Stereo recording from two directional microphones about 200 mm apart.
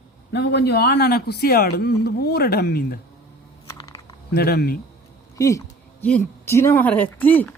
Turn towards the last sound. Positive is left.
turn(degrees=10)  # may be behind; listen again after turning